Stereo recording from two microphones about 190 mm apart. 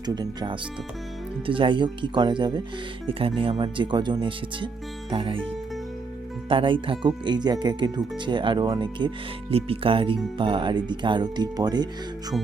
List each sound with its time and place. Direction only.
0.0 s speech: 20° right (ahead or behind)